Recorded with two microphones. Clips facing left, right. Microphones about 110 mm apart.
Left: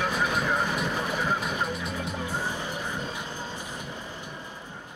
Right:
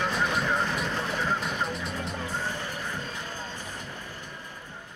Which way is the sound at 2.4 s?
15° left (ahead or behind).